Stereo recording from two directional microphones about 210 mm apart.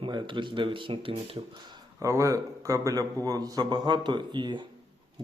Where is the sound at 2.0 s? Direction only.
15° right (ahead or behind).